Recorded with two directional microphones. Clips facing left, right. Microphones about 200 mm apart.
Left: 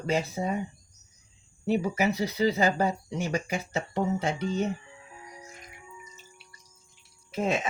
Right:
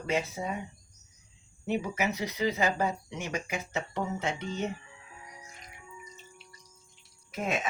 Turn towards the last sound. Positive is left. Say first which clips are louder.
# left 4 dB
turn(degrees=30)  # may be behind; listen again after turning